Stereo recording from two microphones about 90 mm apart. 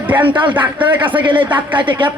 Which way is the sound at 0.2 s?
65° right (ahead or behind).